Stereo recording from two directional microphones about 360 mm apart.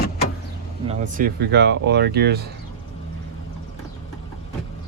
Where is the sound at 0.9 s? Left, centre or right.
Right.